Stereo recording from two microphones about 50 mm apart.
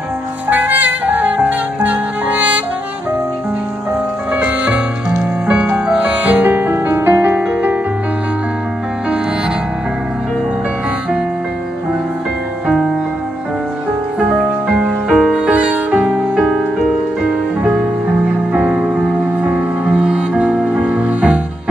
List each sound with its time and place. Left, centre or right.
0.5 s music: right
4.3 s music: right
14.4 s music: right
15.0 s music: centre
18.8 s music: right